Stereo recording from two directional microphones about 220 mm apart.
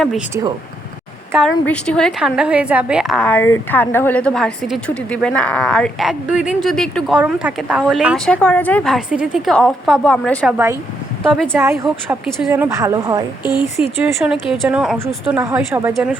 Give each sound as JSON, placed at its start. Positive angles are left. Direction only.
{"t": 1.3, "sound": "a woman's voice", "side_deg": -5}
{"t": 1.6, "sound": "a woman's voice", "side_deg": 5}
{"t": 11.5, "sound": "a woman's voice", "side_deg": -10}
{"t": 13.4, "sound": "speech", "side_deg": 20}
{"t": 13.7, "sound": "a woman's voice", "side_deg": 0}